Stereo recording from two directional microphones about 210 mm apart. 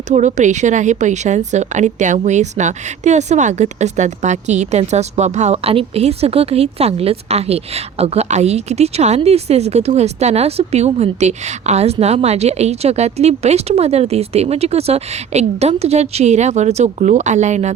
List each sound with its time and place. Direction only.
0.1 s a woman's voice: 35° right (ahead or behind)